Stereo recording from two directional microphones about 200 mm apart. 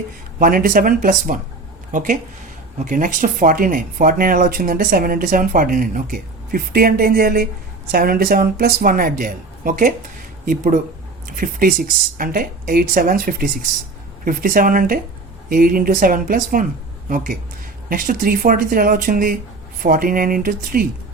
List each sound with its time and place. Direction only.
0.3 s speech: 45° right (ahead or behind)
17.8 s speech: 45° right (ahead or behind)